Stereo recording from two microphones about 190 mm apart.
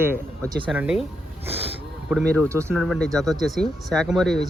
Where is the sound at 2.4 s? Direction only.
15° right (ahead or behind).